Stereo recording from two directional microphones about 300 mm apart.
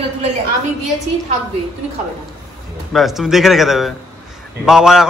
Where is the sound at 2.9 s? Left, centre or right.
Centre.